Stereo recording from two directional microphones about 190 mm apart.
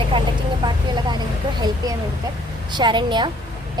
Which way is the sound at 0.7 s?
20° right (ahead or behind).